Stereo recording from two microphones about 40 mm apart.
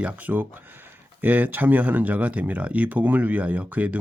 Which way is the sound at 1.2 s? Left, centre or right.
Right.